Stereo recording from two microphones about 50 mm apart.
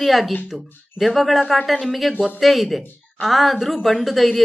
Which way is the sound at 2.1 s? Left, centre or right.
Right.